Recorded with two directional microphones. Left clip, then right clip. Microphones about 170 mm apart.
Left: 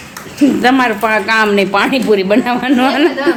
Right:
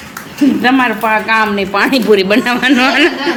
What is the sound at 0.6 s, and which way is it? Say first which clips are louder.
Speech: even; 30° left (ahead or behind).